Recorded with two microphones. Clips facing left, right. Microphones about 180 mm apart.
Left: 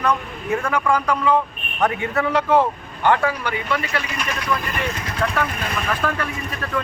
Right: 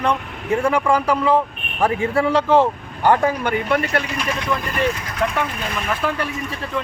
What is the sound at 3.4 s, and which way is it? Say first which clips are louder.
Speech: right 5 dB; 55° right (ahead or behind).